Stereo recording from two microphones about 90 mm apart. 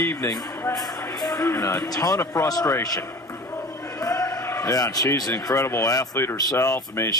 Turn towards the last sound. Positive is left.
turn(degrees=35)  # may be behind; listen again after turning